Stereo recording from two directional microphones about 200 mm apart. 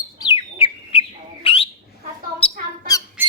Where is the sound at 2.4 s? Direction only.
25° left (ahead or behind).